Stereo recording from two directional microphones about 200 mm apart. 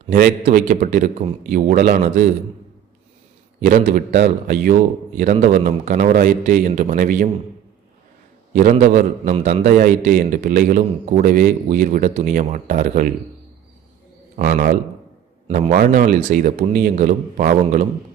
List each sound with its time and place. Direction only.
0.1 s a man's voice: 45° right (ahead or behind)
3.6 s a man's voice: 40° right (ahead or behind)
8.5 s a man's voice: 40° right (ahead or behind)
14.3 s a man's voice: 45° right (ahead or behind)
15.4 s a man's voice: 35° right (ahead or behind)